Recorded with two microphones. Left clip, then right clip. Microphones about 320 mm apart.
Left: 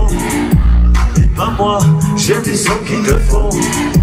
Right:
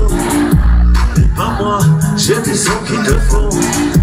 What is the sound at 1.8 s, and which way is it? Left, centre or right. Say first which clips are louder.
Music: even; centre.